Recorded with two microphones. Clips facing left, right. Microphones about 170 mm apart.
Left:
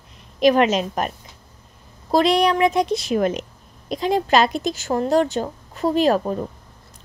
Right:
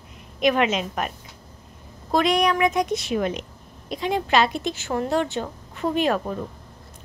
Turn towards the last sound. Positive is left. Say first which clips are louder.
# left 4 dB
turn(degrees=35)  # may be behind; listen again after turning